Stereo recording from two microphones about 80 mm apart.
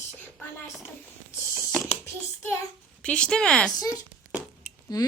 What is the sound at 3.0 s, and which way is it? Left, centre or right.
Speech, centre.